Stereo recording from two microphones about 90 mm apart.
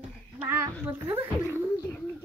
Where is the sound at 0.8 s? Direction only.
20° right (ahead or behind).